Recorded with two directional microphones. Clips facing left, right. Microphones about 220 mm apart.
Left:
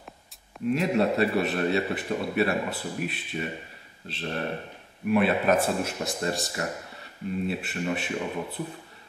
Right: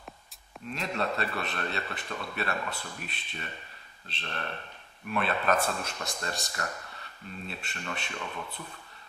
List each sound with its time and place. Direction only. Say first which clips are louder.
0.7 s a man's voice: left 9 dB; 10° left (ahead or behind)
6.6 s speech: left 5 dB; 20° left (ahead or behind)
6.9 s speech: left 11 dB; 10° left (ahead or behind)